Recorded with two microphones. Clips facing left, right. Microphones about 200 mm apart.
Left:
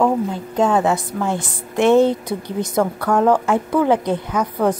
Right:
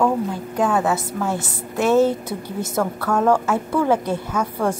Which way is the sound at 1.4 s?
5° right (ahead or behind).